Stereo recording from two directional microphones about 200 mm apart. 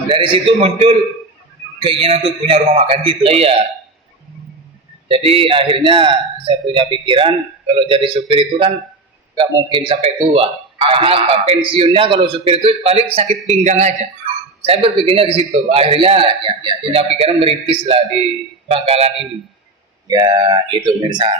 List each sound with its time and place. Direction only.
0.1 s a man's voice: 25° right (ahead or behind)
5.0 s a man's voice: 30° right (ahead or behind)
20.1 s a man's voice: 20° right (ahead or behind)